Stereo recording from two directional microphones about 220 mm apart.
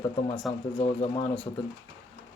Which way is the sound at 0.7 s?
25° left (ahead or behind).